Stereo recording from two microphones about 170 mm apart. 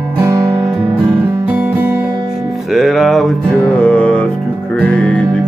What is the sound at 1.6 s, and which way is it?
Music, 15° right (ahead or behind).